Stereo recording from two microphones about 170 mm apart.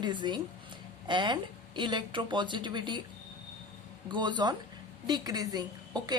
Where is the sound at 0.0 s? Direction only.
25° right (ahead or behind).